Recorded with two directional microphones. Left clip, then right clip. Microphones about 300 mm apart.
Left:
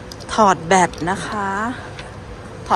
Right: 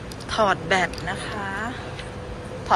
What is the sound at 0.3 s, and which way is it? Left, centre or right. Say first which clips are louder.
Speech: left 6 dB; centre.